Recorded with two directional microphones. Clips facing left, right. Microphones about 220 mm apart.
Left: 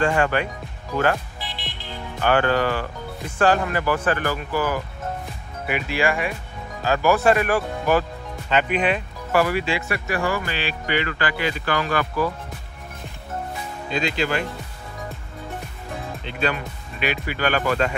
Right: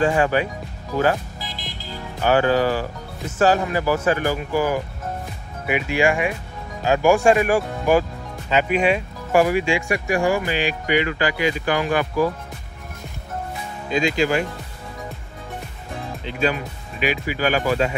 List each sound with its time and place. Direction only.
0.0 s speech: 5° right (ahead or behind)
1.4 s music: 40° right (ahead or behind)
2.2 s speech: 10° right (ahead or behind)
5.9 s speech: 15° right (ahead or behind)
13.9 s speech: 45° right (ahead or behind)
16.3 s speech: 5° right (ahead or behind)